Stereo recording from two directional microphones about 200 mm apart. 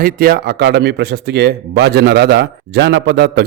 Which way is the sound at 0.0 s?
50° right (ahead or behind).